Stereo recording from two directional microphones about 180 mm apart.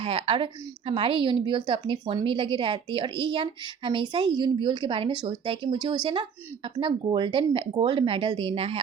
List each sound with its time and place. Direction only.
0.0 s a woman's voice: 30° right (ahead or behind)